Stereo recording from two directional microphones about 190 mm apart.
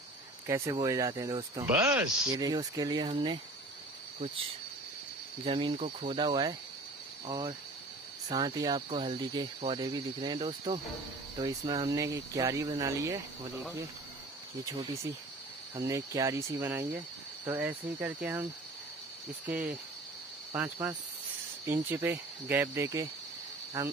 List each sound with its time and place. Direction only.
0.5 s speech: 15° right (ahead or behind)
5.4 s speech: 25° right (ahead or behind)
14.6 s speech: 20° right (ahead or behind)